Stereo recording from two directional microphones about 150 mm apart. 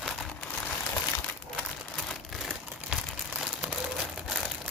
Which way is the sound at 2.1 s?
Centre (ahead or behind).